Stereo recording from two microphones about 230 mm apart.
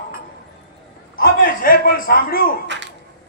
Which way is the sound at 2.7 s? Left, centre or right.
Right.